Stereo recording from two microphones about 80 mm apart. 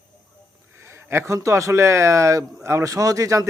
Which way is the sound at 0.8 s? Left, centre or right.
Right.